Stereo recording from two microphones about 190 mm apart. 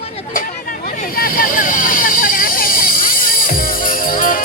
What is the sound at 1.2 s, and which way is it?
Vehicle, 50° left (ahead or behind).